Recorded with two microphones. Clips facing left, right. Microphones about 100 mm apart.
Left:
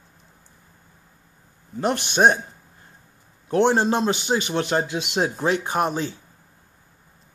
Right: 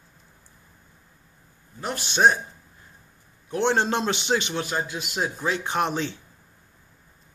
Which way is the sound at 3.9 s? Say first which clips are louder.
Left 3 dB; 40° left (ahead or behind).